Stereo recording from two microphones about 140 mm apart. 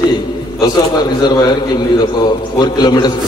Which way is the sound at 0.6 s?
30° left (ahead or behind).